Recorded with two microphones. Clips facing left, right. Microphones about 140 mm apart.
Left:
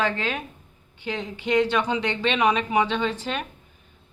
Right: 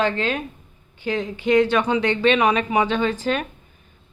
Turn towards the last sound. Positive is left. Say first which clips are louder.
# right 5 dB
turn(degrees=-50)  # may be behind; listen again after turning